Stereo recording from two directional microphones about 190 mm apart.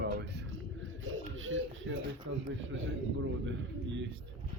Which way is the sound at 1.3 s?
85° right.